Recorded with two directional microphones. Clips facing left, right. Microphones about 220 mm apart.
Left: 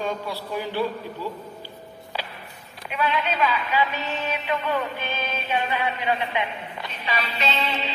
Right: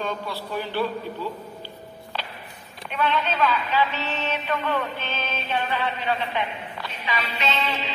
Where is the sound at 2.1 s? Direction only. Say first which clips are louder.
Left 1 dB; 10° left (ahead or behind).